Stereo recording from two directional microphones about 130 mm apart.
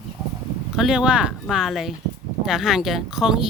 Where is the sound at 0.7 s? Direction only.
5° right (ahead or behind).